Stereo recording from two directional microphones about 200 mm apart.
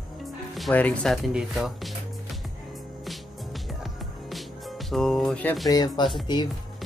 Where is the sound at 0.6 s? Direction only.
5° left (ahead or behind).